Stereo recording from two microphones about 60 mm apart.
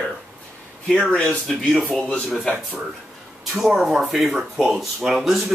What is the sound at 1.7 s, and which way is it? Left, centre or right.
Speech, centre.